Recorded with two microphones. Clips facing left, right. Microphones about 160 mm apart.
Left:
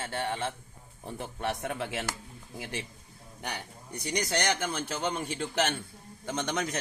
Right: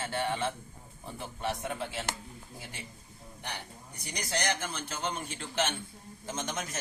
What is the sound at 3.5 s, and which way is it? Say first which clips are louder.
A man's voice: left 4 dB; 75° left (ahead or behind).